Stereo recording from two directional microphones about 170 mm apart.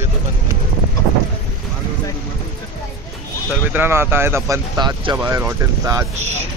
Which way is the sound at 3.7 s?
15° right (ahead or behind).